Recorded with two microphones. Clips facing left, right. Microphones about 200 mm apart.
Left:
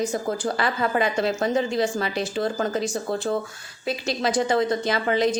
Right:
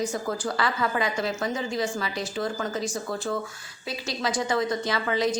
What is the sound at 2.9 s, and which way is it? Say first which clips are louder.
Speech: left 4 dB; 40° left (ahead or behind).